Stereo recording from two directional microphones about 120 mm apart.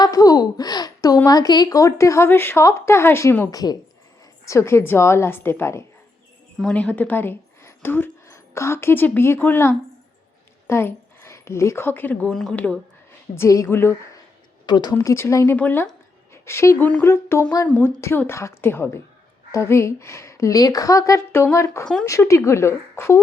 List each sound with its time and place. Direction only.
0.0 s a woman's voice: 30° left (ahead or behind)
3.5 s a woman's voice: 35° left (ahead or behind); by 12.3 s 15° left (ahead or behind)
12.3 s speech: 5° left (ahead or behind)
12.5 s speech: 15° left (ahead or behind)
13.3 s a woman's voice: 25° left (ahead or behind)
14.7 s speech: 35° left (ahead or behind)
14.9 s a woman's voice: 20° left (ahead or behind)